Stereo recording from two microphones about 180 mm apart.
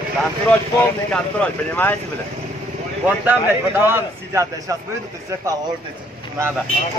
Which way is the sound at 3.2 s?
10° right (ahead or behind).